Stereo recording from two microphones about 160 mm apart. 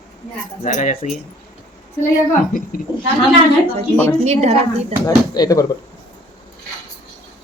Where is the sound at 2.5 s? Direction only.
60° left (ahead or behind).